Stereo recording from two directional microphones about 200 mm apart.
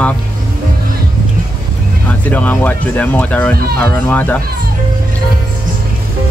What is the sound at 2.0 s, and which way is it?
Speech, 10° left (ahead or behind).